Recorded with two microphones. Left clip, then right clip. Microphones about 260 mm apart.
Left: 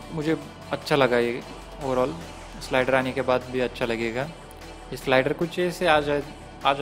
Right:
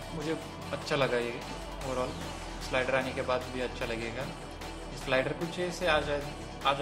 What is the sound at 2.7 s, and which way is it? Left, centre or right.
Speech, left.